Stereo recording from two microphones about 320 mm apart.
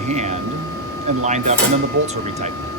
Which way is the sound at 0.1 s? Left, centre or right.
Right.